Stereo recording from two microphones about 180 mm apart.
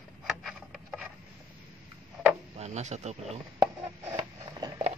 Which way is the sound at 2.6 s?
40° right (ahead or behind).